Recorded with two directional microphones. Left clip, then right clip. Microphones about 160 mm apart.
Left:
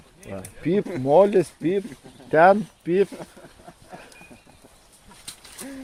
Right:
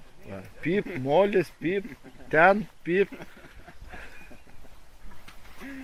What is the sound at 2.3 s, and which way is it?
Speech, 5° left (ahead or behind).